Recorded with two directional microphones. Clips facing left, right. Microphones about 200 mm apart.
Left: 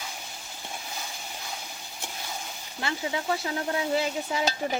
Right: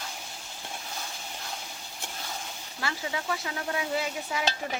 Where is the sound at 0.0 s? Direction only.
5° left (ahead or behind).